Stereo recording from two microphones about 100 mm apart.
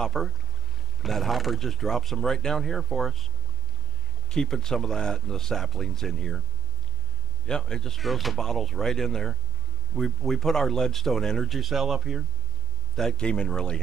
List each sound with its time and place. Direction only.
0.0 s speech: centre (ahead or behind)
4.3 s speech: 5° left (ahead or behind)
7.4 s speech: 5° left (ahead or behind)
12.9 s speech: 5° left (ahead or behind)